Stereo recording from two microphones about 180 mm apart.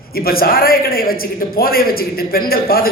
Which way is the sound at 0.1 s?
55° left (ahead or behind).